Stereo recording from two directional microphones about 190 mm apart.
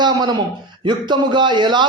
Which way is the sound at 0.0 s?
20° right (ahead or behind).